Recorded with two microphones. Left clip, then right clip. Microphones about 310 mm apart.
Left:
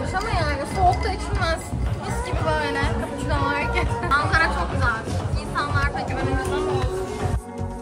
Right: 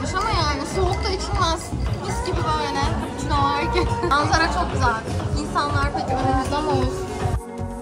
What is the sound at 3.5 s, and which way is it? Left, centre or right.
Speech, centre.